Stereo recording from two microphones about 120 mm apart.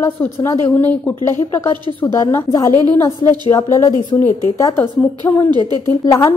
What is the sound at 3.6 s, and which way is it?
A woman's voice, 25° left (ahead or behind).